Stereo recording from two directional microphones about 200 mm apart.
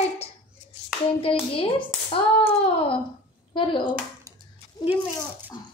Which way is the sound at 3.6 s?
25° left (ahead or behind).